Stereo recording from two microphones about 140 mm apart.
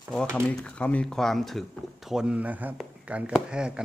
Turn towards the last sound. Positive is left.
turn(degrees=-5)  # may be behind; listen again after turning